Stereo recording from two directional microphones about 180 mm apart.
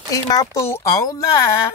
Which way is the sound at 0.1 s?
20° left (ahead or behind).